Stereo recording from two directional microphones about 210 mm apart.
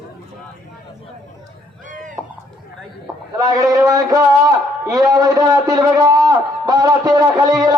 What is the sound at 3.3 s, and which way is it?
A man's voice, 15° right (ahead or behind).